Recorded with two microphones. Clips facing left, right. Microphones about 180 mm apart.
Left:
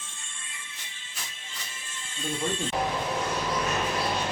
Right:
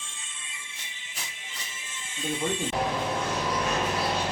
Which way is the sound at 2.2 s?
15° right (ahead or behind).